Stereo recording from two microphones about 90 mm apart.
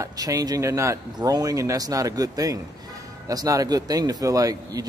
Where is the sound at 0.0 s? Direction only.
40° right (ahead or behind).